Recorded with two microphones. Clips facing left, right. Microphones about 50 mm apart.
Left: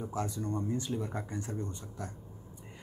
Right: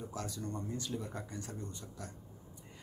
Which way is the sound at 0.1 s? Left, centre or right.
Left.